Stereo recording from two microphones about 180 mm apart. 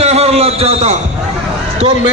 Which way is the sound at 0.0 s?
35° right (ahead or behind).